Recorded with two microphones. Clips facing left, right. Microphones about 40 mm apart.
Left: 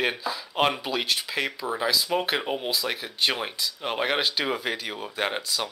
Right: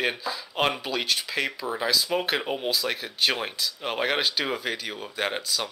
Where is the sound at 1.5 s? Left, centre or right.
Centre.